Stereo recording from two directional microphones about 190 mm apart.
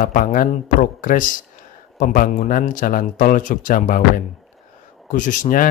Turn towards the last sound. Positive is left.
turn(degrees=45)  # may be behind; listen again after turning